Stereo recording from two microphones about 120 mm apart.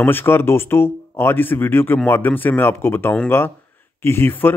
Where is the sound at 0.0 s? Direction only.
20° left (ahead or behind).